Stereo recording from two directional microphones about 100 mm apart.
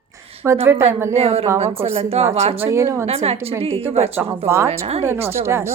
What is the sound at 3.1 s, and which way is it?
Speech, 90° right.